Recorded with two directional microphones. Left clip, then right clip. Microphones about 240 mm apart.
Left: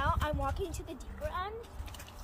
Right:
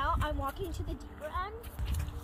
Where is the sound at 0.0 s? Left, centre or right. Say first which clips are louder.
Even; centre.